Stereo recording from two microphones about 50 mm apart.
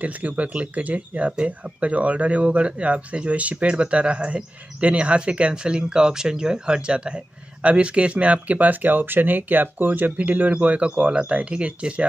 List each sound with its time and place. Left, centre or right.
0.0 s speech: right